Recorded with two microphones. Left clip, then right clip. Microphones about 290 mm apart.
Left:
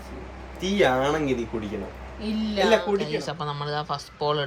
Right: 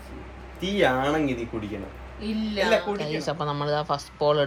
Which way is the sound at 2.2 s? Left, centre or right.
Centre.